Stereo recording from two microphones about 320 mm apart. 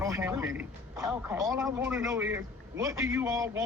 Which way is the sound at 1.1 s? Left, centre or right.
Centre.